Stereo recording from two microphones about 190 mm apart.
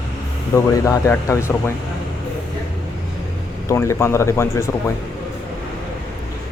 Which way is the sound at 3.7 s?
15° left (ahead or behind).